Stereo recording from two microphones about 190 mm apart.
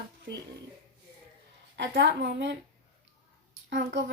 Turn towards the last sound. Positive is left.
turn(degrees=-60)  # may be behind; listen again after turning